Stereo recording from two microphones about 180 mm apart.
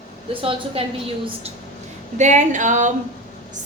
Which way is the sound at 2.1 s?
40° right (ahead or behind).